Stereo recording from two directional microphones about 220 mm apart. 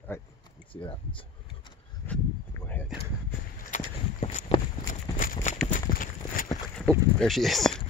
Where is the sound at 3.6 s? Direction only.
35° left (ahead or behind).